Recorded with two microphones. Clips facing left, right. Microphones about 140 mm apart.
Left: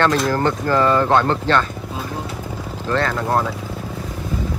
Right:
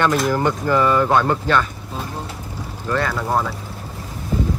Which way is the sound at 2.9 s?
5° right (ahead or behind).